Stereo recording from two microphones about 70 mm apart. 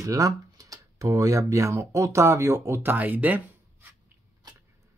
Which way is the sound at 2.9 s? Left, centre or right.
Right.